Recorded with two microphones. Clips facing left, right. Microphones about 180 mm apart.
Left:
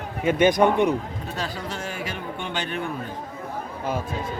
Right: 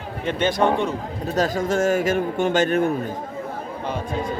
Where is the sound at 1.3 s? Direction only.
45° right (ahead or behind).